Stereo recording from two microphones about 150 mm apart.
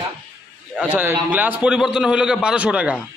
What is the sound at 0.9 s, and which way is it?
A man's voice, 10° right (ahead or behind).